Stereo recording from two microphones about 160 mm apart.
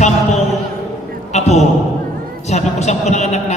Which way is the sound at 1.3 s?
45° left (ahead or behind).